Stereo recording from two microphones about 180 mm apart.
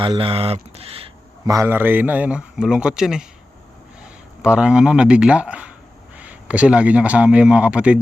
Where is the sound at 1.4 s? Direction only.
15° right (ahead or behind).